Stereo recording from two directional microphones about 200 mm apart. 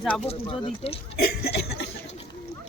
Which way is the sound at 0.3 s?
30° left (ahead or behind).